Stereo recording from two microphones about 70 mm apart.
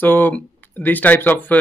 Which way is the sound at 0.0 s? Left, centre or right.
Left.